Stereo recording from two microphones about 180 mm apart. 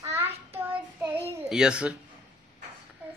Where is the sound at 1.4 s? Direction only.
5° right (ahead or behind).